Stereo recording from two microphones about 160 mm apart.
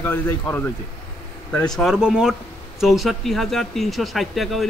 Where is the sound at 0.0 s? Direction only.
15° left (ahead or behind).